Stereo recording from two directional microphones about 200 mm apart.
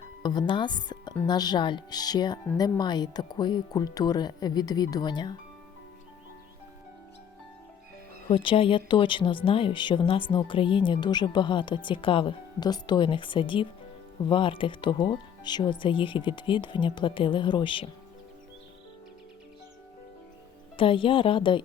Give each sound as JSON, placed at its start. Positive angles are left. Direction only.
{"t": 0.2, "sound": "speech", "side_deg": 20}
{"t": 8.3, "sound": "speech", "side_deg": 25}
{"t": 20.7, "sound": "speech", "side_deg": 25}